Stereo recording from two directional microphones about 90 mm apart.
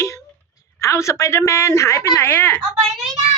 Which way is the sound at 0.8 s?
35° left (ahead or behind).